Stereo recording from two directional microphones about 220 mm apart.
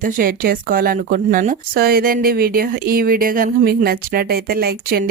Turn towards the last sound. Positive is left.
turn(degrees=-45)  # may be behind; listen again after turning